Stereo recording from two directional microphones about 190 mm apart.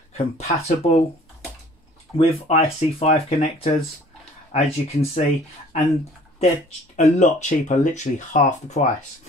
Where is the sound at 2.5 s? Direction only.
30° left (ahead or behind).